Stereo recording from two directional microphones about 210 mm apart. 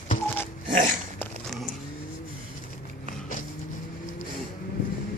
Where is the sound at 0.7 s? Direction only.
35° right (ahead or behind).